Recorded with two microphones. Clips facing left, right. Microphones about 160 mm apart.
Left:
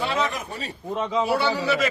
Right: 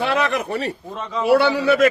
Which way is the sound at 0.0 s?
70° right (ahead or behind).